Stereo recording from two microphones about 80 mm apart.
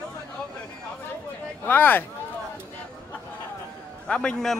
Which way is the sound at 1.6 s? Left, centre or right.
Left.